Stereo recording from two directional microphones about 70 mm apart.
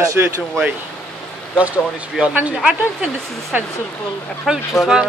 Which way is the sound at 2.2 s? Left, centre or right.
Centre.